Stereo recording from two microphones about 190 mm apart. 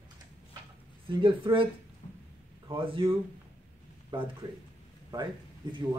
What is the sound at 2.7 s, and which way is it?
Speech, 30° right (ahead or behind).